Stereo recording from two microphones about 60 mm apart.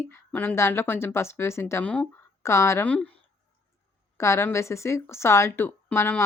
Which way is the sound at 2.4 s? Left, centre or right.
Left.